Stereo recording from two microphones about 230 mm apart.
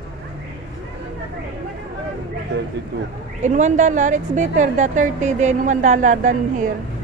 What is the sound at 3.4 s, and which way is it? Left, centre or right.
A woman's voice, right.